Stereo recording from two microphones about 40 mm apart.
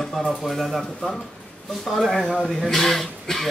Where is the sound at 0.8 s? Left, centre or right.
Left.